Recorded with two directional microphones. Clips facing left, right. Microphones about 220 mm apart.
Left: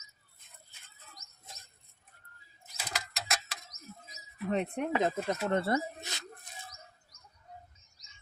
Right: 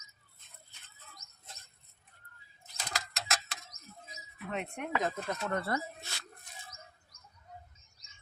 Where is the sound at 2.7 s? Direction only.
5° left (ahead or behind).